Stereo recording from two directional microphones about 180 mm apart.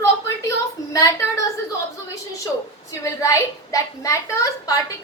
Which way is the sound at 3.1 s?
20° left (ahead or behind).